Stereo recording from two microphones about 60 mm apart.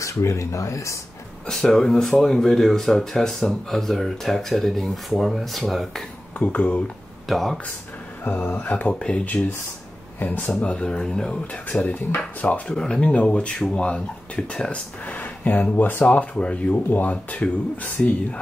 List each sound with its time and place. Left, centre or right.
0.0 s speech: left
1.5 s speech: centre
6.3 s speech: left
7.2 s speech: centre
8.5 s speech: left
9.2 s speech: left
15.0 s speech: left